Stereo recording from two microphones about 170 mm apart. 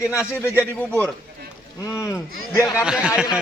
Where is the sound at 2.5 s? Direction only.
15° left (ahead or behind).